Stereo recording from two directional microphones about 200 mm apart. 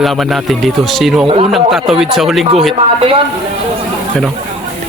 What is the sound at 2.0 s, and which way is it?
Speech, centre (ahead or behind).